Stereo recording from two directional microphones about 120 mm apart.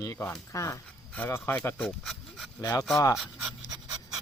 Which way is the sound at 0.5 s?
25° left (ahead or behind).